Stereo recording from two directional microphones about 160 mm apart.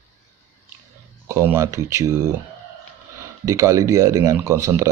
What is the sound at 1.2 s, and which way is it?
Speech, 15° right (ahead or behind).